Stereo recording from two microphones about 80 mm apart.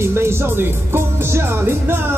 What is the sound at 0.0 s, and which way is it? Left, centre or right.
Speech, right.